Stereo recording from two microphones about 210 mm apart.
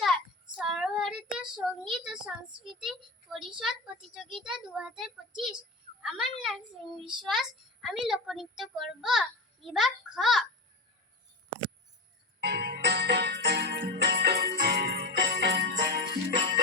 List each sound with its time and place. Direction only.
0.5 s child singing: centre (ahead or behind)
2.8 s a sound: centre (ahead or behind)
4.4 s a child's voice: 5° right (ahead or behind)
6.0 s a sound: 5° right (ahead or behind)
7.3 s a child's voice: centre (ahead or behind)
12.4 s music: 50° right (ahead or behind)